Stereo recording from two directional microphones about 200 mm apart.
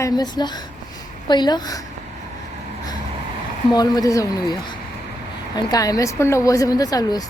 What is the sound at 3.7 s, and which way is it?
A woman's voice, 20° left (ahead or behind).